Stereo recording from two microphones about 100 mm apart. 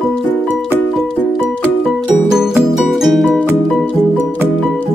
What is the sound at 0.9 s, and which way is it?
Music, 5° right (ahead or behind).